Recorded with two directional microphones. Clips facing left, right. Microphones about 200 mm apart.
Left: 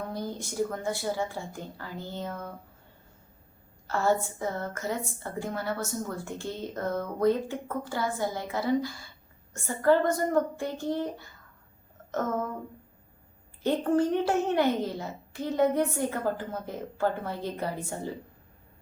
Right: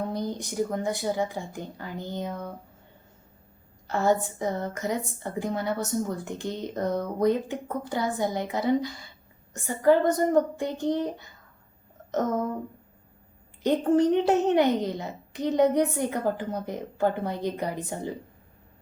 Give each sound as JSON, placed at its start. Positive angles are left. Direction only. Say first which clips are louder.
{"t": 0.0, "sound": "speech", "louder": "right 4 dB", "side_deg": -20}
{"t": 3.8, "sound": "a woman's voice", "louder": "right 2 dB", "side_deg": -15}
{"t": 13.6, "sound": "speech", "louder": "right 3 dB", "side_deg": -20}